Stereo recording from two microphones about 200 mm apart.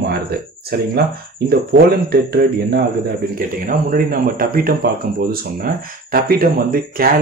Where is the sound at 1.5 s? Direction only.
50° right (ahead or behind).